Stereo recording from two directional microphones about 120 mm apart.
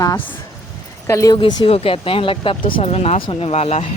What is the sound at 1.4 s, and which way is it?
Speech, 40° left (ahead or behind).